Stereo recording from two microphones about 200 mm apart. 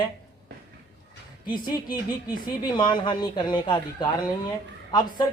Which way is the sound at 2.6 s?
25° left (ahead or behind).